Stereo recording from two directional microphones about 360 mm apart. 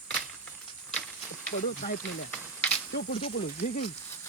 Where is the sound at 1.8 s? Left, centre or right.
Centre.